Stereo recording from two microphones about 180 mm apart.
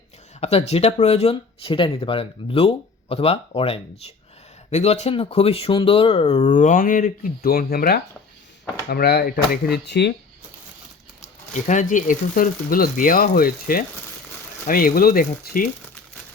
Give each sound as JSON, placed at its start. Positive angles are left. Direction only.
{"t": 0.3, "sound": "speech", "side_deg": 35}
{"t": 6.5, "sound": "speech", "side_deg": 45}
{"t": 11.5, "sound": "speech", "side_deg": 45}